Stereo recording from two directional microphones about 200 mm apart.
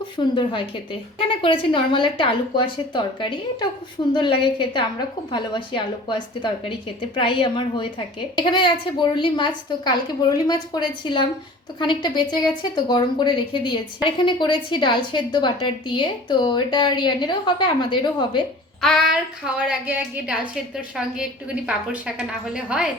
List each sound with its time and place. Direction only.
0.2 s speech: 25° left (ahead or behind)
18.8 s a woman's voice: centre (ahead or behind)